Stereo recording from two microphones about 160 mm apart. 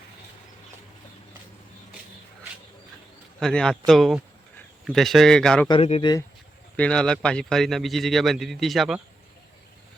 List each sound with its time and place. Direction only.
3.4 s speech: 5° left (ahead or behind)
5.8 s speech: 40° left (ahead or behind)
6.7 s speech: 5° left (ahead or behind)